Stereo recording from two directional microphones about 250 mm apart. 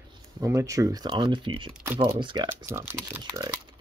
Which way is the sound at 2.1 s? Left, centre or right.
Centre.